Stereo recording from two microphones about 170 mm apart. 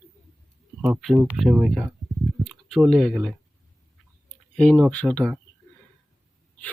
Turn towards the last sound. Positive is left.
turn(degrees=5)  # may be behind; listen again after turning